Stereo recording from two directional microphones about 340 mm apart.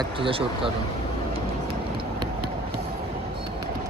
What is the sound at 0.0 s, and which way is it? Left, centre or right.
Speech, centre.